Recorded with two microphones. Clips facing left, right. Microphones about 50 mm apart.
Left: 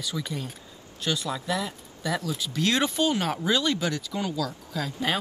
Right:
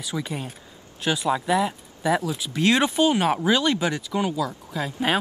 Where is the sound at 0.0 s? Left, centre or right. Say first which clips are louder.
Right 3 dB; right.